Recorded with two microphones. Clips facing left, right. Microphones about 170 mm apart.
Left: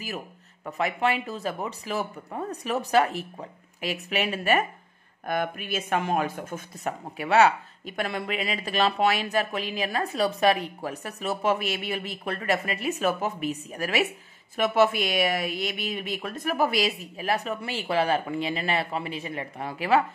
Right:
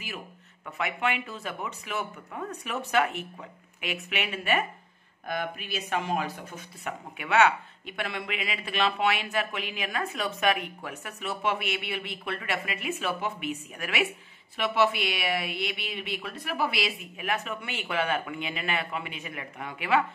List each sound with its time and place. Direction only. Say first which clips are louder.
0.7 s speech: left 4 dB; 35° left (ahead or behind)
5.2 s speech: left 4 dB; 50° left (ahead or behind)